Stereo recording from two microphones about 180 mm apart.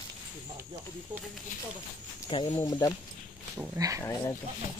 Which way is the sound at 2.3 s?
25° left (ahead or behind).